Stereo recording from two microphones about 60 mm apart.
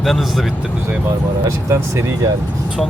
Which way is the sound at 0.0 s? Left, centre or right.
Centre.